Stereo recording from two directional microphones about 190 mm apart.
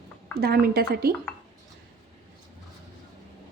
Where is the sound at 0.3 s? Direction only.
55° right (ahead or behind).